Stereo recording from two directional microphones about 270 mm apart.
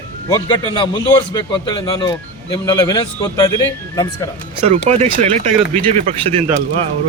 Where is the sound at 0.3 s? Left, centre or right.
Centre.